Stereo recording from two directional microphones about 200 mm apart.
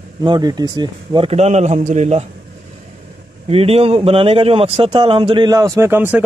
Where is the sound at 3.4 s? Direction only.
30° right (ahead or behind).